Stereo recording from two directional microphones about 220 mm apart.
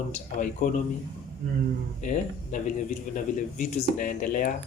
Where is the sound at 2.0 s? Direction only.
35° left (ahead or behind).